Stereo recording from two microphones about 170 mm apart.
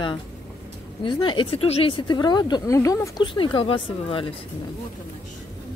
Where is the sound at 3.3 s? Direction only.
30° left (ahead or behind).